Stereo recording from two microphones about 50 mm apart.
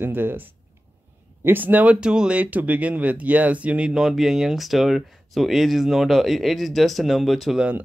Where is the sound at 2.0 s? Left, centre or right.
Centre.